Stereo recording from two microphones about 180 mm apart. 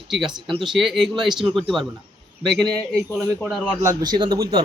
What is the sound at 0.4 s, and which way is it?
Speech, 30° right (ahead or behind).